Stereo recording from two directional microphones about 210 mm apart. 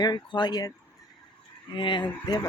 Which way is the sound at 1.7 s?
20° left (ahead or behind).